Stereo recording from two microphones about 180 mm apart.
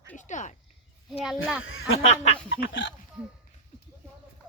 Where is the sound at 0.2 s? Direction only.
45° left (ahead or behind).